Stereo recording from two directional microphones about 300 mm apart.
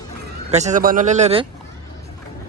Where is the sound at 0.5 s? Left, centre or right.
Right.